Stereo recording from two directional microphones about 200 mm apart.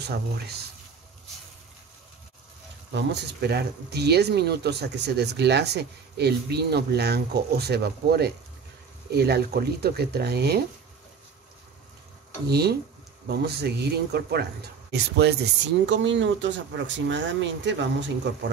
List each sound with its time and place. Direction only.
0.0 s speech: 55° right (ahead or behind)
2.9 s speech: 60° right (ahead or behind)
12.4 s speech: 55° right (ahead or behind)